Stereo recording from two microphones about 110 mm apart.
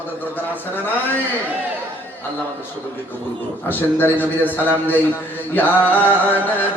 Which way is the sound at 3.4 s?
20° left (ahead or behind).